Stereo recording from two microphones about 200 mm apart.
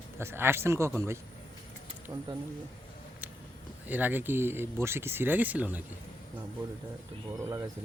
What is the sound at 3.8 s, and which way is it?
Speech, 10° right (ahead or behind).